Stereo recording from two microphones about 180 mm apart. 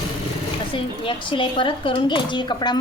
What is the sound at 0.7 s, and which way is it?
A woman's voice, 30° left (ahead or behind).